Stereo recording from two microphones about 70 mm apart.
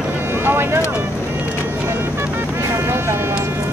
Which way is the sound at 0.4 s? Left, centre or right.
Right.